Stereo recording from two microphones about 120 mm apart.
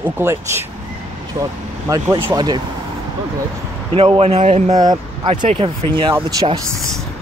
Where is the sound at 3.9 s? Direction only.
50° right (ahead or behind); by 4.8 s 70° right (ahead or behind).